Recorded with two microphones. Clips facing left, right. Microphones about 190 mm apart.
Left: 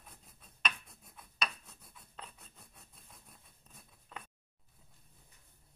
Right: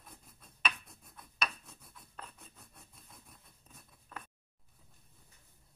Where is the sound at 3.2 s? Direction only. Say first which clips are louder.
Right 1 dB; centre (ahead or behind).